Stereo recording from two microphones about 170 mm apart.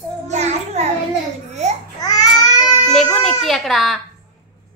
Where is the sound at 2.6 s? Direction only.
Centre (ahead or behind).